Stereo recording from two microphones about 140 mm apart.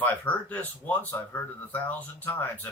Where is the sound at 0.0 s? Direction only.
10° left (ahead or behind).